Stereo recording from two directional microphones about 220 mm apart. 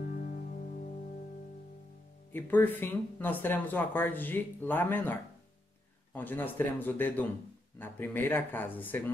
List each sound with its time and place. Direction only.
0.0 s music: 40° left (ahead or behind)
2.3 s speech: 10° left (ahead or behind)